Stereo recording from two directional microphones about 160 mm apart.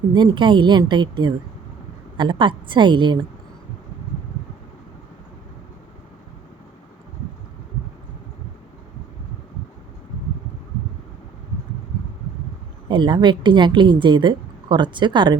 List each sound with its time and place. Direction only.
0.1 s a woman's voice: 30° right (ahead or behind)
12.9 s a woman's voice: 30° right (ahead or behind)